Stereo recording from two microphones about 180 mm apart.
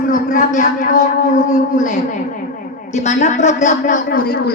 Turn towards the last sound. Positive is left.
turn(degrees=55)  # may be behind; listen again after turning